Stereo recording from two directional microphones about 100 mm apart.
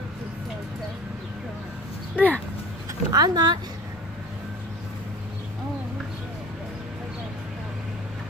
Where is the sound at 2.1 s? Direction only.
15° left (ahead or behind).